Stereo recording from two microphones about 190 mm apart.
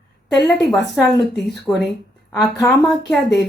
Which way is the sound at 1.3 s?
60° left (ahead or behind).